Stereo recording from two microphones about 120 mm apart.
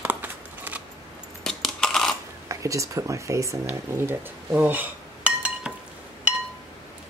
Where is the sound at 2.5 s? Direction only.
25° right (ahead or behind).